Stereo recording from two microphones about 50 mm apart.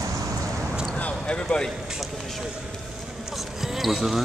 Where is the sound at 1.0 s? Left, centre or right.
Left.